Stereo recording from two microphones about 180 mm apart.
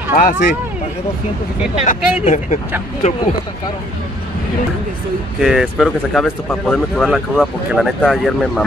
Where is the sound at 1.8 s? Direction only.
40° left (ahead or behind).